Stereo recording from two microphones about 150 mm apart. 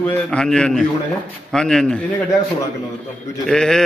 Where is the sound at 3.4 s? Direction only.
5° left (ahead or behind).